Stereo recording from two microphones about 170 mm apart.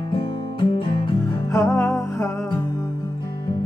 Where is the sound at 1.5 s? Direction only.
15° left (ahead or behind).